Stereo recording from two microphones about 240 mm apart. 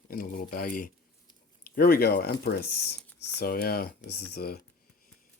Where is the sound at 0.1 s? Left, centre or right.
Left.